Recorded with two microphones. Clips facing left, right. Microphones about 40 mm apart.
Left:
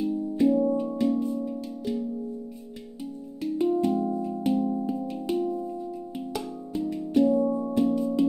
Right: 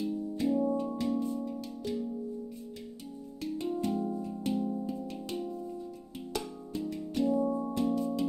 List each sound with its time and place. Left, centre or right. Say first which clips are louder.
0.0 s music: left 8 dB; centre
3.5 s music: left 9 dB; centre